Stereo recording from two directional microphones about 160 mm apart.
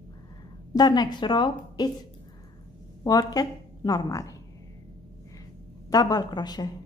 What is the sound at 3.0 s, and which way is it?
A woman's voice, 25° left (ahead or behind).